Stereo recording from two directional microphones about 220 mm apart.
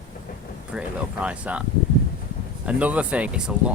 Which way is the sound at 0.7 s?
5° right (ahead or behind).